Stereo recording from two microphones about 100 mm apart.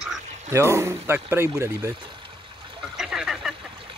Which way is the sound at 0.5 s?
25° right (ahead or behind).